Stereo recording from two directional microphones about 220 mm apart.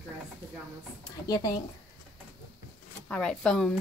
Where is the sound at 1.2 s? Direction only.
15° left (ahead or behind).